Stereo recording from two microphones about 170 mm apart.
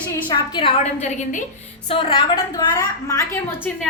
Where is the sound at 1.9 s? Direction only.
30° left (ahead or behind).